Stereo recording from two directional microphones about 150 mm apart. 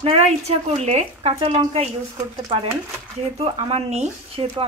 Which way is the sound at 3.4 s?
45° right (ahead or behind).